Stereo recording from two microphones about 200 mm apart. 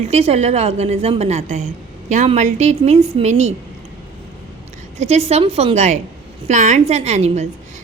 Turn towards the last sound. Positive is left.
turn(degrees=-35)  # may be behind; listen again after turning